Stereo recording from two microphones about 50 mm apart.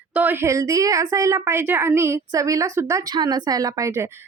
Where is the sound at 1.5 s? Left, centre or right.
Right.